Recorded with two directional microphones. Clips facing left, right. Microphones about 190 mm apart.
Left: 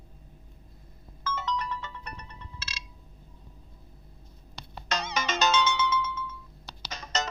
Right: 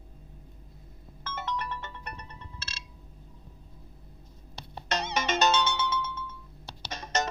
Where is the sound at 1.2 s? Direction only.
55° right (ahead or behind).